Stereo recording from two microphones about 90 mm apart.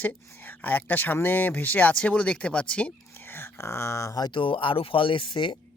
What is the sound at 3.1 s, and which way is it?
Speech, 25° left (ahead or behind).